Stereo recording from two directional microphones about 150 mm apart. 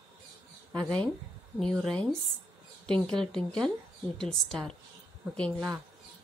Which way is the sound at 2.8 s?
5° left (ahead or behind).